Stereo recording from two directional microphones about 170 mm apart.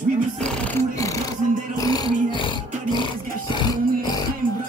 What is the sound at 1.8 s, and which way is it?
Roar, 20° left (ahead or behind).